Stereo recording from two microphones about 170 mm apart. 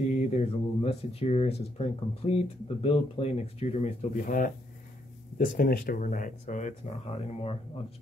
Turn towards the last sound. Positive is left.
turn(degrees=35)  # may be behind; listen again after turning